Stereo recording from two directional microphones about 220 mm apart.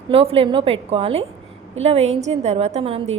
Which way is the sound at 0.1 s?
25° right (ahead or behind).